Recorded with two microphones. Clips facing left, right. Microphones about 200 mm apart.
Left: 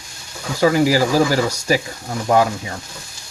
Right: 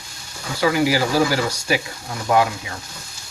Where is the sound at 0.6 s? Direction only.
40° left (ahead or behind).